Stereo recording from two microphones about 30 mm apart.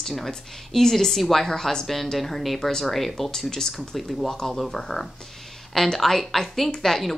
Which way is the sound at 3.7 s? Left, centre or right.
Centre.